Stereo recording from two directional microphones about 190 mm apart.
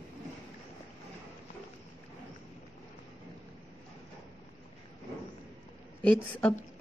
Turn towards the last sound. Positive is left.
turn(degrees=5)  # may be behind; listen again after turning